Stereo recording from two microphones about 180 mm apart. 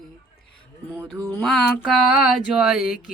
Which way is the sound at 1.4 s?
Centre (ahead or behind).